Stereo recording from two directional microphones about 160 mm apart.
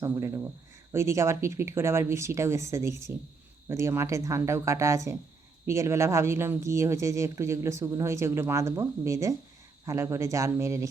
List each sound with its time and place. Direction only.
0.0 s speech: 15° right (ahead or behind)